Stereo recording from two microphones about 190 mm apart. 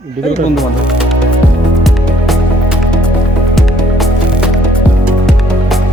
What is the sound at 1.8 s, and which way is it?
Music, centre (ahead or behind).